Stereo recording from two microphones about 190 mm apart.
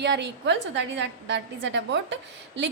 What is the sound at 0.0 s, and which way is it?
A woman's voice, 65° right (ahead or behind).